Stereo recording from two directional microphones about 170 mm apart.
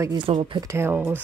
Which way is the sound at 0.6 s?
15° right (ahead or behind).